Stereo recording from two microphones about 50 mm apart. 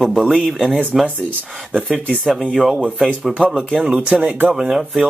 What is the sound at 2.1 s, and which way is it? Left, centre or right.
Speech, centre.